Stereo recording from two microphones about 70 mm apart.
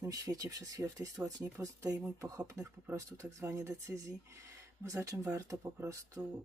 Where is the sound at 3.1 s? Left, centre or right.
Right.